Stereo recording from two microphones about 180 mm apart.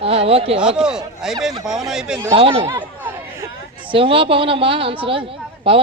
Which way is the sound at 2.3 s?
30° right (ahead or behind).